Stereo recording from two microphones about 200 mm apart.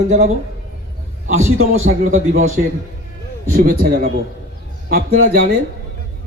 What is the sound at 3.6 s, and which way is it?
A man's voice, 45° right (ahead or behind).